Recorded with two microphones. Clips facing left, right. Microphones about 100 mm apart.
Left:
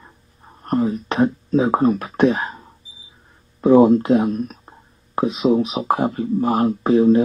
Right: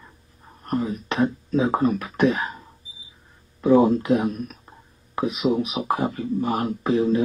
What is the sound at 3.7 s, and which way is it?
Speech, 30° left (ahead or behind).